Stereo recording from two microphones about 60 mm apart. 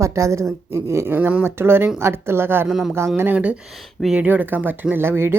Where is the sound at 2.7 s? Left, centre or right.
Centre.